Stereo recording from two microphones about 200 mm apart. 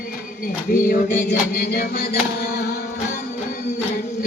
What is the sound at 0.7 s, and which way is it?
Music, 50° left (ahead or behind).